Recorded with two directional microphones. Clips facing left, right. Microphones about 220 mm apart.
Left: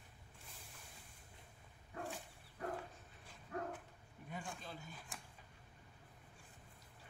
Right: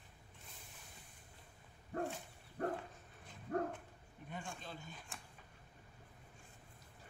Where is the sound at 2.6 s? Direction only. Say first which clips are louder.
Right 5 dB; 55° right (ahead or behind).